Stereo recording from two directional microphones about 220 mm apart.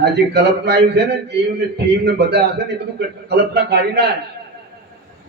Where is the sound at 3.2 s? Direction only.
50° right (ahead or behind).